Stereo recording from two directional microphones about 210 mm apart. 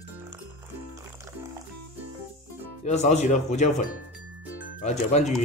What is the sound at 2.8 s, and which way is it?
Speech, 35° left (ahead or behind).